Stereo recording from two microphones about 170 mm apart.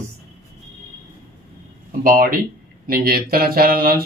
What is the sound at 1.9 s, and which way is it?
Speech, 55° right (ahead or behind).